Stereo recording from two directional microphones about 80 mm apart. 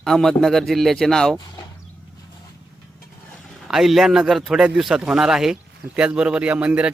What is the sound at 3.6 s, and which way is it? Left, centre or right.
Speech, centre.